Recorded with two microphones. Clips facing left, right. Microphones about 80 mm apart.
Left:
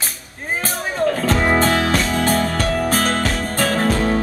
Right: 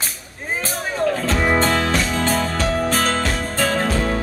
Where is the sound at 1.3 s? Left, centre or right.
Centre.